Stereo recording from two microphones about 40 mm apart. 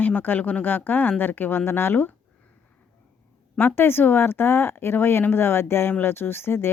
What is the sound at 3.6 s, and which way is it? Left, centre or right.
Speech, left.